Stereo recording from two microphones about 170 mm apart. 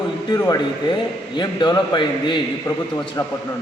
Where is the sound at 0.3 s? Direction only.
20° left (ahead or behind).